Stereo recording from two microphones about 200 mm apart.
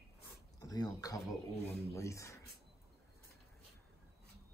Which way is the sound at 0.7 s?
20° left (ahead or behind).